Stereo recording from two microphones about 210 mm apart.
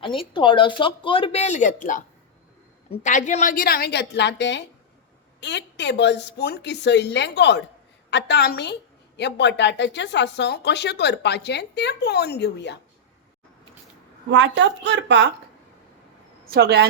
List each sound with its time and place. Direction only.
0.0 s a woman's voice: 25° left (ahead or behind); by 12.8 s 55° left (ahead or behind)
14.3 s a woman's voice: 60° right (ahead or behind)
16.5 s speech: 50° right (ahead or behind)